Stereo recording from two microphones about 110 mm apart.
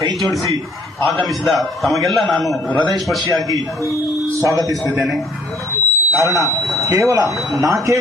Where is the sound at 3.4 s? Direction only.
30° right (ahead or behind).